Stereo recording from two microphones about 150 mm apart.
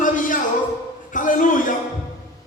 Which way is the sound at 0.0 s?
60° left (ahead or behind).